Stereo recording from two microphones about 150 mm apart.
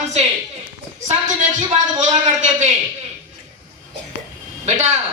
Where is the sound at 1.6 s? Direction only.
50° right (ahead or behind).